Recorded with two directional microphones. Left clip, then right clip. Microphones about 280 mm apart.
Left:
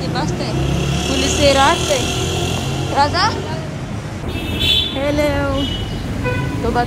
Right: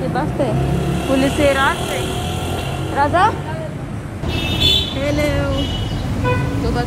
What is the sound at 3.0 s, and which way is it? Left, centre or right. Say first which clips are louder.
Speech: right 1 dB; centre.